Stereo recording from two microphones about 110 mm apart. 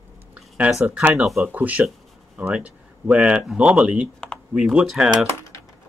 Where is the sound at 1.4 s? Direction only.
15° right (ahead or behind).